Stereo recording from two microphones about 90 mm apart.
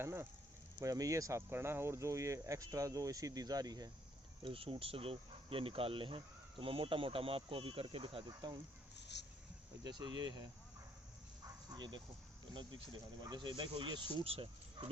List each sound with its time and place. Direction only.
0.0 s speech: 30° right (ahead or behind)
0.8 s speech: 40° right (ahead or behind)
4.4 s speech: 85° right
8.3 s speech: 55° right (ahead or behind)
9.8 s speech: 55° right (ahead or behind)
11.4 s bow-wow: 50° right (ahead or behind)
12.5 s speech: 65° right (ahead or behind); by 14.8 s 85° right